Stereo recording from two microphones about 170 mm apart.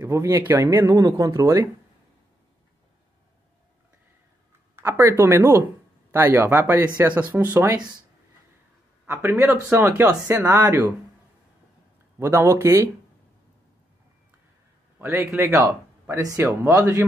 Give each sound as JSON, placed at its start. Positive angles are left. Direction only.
{"t": 0.0, "sound": "speech", "side_deg": -15}
{"t": 4.7, "sound": "speech", "side_deg": -15}
{"t": 9.0, "sound": "speech", "side_deg": -15}
{"t": 12.2, "sound": "speech", "side_deg": -15}
{"t": 15.0, "sound": "speech", "side_deg": -15}